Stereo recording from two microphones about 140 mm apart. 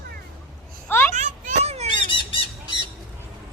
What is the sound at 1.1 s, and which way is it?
Children playing, 55° right (ahead or behind).